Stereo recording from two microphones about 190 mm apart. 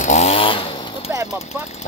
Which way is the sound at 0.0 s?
35° left (ahead or behind).